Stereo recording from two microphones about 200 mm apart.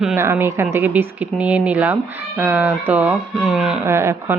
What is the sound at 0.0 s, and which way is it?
Speech, 10° right (ahead or behind).